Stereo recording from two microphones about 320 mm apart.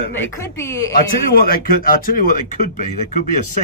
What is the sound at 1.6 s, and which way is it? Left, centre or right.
Speech, left.